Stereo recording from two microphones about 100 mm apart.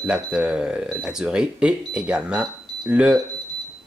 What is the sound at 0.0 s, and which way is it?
Speech, 10° right (ahead or behind).